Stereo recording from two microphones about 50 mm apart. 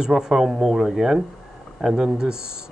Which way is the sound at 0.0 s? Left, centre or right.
Centre.